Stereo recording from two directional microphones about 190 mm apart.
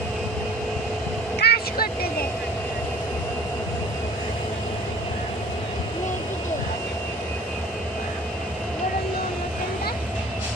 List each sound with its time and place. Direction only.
1.4 s vehicle: 55° left (ahead or behind)